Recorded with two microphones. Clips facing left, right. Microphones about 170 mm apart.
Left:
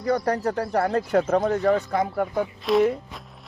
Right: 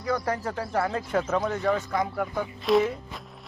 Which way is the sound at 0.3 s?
65° left (ahead or behind).